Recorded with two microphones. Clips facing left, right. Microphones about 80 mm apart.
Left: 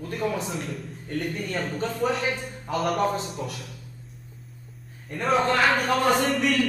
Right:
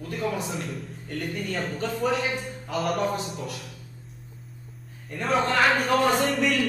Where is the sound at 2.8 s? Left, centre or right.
Centre.